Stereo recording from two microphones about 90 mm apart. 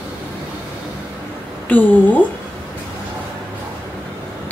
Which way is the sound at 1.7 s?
20° left (ahead or behind).